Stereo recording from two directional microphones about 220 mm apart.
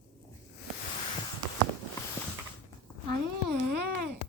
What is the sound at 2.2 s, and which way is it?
Mechanisms, 10° left (ahead or behind).